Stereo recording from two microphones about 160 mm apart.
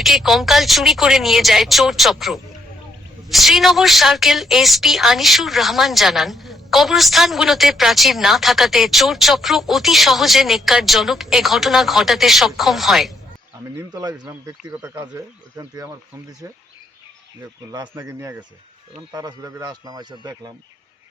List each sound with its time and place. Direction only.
0.0 s a woman's voice: centre (ahead or behind)
13.9 s a man's voice: 25° right (ahead or behind)
17.7 s a man's voice: 20° right (ahead or behind)